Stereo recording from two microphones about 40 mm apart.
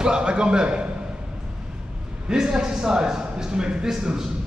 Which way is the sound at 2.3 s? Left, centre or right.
Centre.